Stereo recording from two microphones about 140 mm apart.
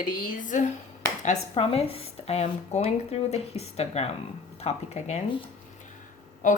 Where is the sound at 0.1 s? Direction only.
70° left (ahead or behind).